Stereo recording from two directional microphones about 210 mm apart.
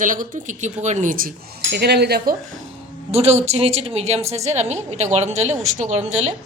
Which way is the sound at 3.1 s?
30° right (ahead or behind).